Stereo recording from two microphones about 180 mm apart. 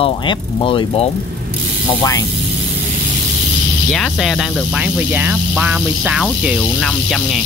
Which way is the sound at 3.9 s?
Centre (ahead or behind).